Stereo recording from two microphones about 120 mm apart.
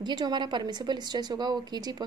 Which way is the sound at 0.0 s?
35° right (ahead or behind).